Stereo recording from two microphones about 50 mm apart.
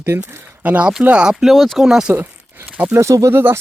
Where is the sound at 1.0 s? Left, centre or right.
Right.